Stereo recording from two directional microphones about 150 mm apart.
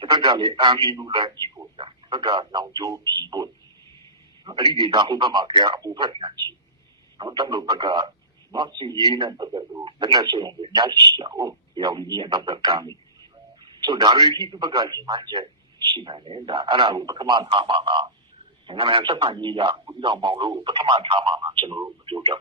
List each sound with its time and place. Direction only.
0.0 s a man's voice: 30° right (ahead or behind)
3.0 s speech: 20° left (ahead or behind)
3.2 s a man's voice: 25° right (ahead or behind)